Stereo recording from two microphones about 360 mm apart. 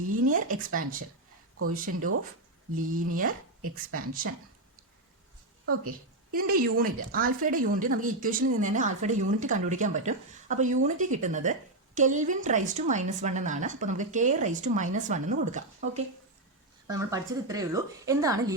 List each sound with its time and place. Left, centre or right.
0.3 s speech: right
1.7 s a woman's voice: right
5.8 s a woman's voice: right
16.8 s a woman's voice: centre